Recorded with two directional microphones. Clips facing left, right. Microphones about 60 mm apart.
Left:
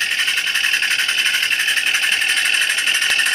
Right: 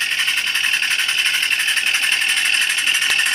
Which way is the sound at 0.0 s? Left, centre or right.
Centre.